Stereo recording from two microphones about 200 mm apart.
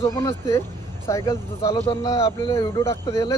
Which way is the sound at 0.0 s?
15° left (ahead or behind).